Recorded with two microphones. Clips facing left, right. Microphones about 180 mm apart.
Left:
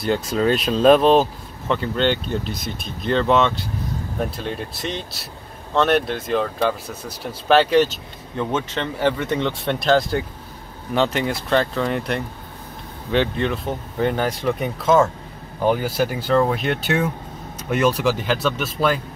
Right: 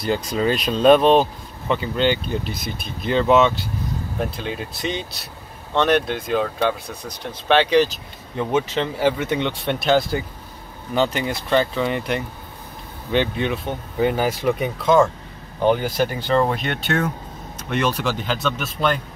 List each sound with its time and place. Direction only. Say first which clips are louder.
0.0 s speech: left 1 dB; centre (ahead or behind)
8.4 s speech: right 3 dB; 10° right (ahead or behind)